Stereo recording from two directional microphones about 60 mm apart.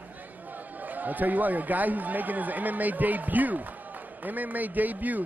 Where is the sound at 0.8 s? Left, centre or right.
Right.